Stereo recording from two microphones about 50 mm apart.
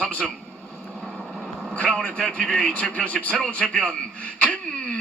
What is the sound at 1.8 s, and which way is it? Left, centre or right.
Speech, centre.